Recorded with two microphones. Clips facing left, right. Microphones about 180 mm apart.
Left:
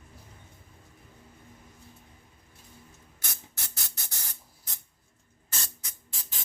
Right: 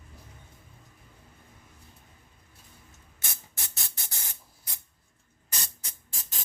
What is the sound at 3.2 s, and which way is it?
Spray, 25° right (ahead or behind).